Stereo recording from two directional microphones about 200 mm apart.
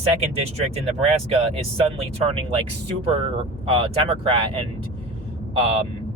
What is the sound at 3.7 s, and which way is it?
Speech, 25° right (ahead or behind).